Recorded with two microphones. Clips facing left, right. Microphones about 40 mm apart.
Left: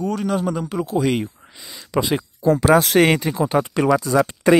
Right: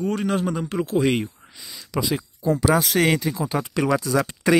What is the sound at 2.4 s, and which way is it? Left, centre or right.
Speech, left.